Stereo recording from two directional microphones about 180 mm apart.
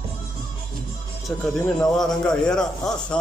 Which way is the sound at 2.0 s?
5° left (ahead or behind).